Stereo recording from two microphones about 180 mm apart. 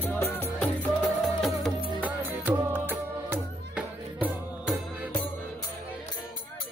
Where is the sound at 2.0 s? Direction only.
10° right (ahead or behind).